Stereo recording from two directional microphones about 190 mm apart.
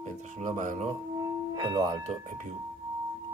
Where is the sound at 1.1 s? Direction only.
20° right (ahead or behind).